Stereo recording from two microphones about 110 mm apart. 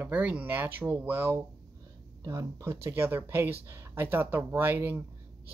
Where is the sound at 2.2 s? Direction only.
30° right (ahead or behind).